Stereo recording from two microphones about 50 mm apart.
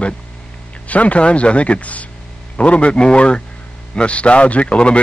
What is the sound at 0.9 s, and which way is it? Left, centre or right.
A man's voice, left.